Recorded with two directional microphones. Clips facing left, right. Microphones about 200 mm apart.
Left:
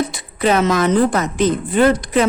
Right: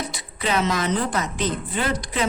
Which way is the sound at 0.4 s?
50° left (ahead or behind).